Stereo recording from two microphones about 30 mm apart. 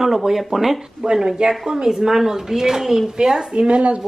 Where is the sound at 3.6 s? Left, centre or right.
Right.